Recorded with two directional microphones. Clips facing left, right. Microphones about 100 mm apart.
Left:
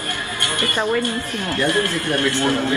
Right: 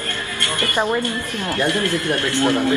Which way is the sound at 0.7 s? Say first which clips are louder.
Even; 20° right (ahead or behind).